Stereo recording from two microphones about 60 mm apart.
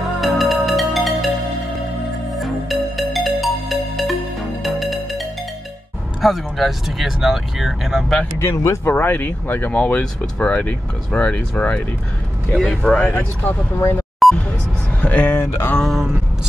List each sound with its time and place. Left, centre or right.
0.2 s music: centre
2.3 s music: centre
6.2 s speech: centre
8.4 s speech: left
8.8 s speech: left
9.8 s speech: left
12.5 s speech: centre
13.0 s speech: left
14.2 s music: centre
15.0 s a sound: left
15.3 s a sound: left
15.8 s speech: centre